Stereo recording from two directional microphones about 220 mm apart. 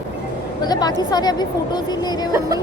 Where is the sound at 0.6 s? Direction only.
20° left (ahead or behind).